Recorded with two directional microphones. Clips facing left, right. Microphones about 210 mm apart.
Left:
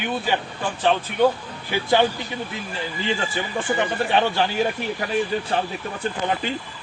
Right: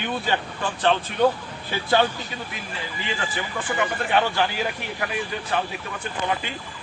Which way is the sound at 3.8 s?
25° left (ahead or behind).